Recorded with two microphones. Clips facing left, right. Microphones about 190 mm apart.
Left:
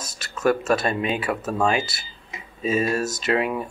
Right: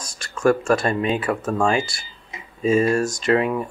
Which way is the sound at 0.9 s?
15° left (ahead or behind).